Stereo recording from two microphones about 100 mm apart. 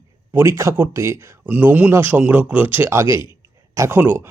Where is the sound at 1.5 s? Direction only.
15° right (ahead or behind).